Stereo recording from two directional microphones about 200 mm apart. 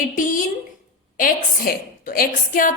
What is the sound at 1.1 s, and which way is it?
A woman's voice, 45° left (ahead or behind).